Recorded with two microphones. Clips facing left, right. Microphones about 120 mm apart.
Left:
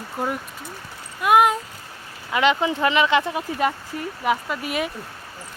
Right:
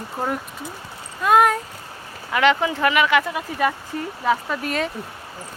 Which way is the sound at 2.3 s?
20° left (ahead or behind).